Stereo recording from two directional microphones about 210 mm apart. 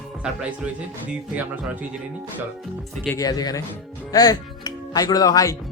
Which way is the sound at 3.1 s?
15° left (ahead or behind).